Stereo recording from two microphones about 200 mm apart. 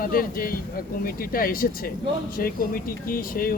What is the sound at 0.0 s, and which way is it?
Speech, 45° left (ahead or behind).